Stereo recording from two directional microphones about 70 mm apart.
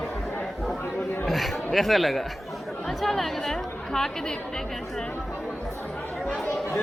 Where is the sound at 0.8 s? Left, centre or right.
Left.